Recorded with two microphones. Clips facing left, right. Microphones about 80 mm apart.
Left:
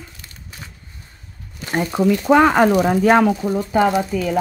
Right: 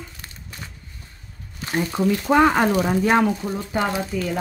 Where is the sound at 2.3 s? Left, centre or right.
Left.